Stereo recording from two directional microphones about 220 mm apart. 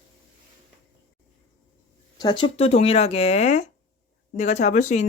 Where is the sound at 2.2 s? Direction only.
20° left (ahead or behind).